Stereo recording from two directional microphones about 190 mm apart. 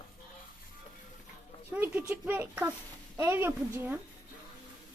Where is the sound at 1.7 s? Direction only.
10° right (ahead or behind).